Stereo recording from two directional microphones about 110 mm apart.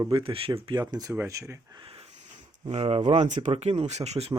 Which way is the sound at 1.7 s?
55° right (ahead or behind).